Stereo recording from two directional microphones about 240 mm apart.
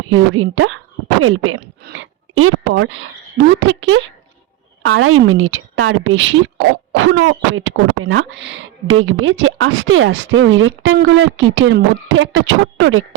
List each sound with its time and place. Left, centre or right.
0.1 s a woman's voice: right